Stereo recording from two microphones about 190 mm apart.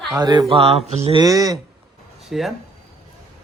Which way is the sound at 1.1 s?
20° right (ahead or behind).